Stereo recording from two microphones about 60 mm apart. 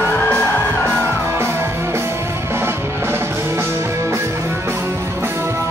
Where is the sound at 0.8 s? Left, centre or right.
Right.